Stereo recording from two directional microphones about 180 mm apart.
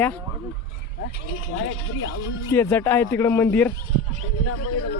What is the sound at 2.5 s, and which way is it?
Speech, 10° left (ahead or behind).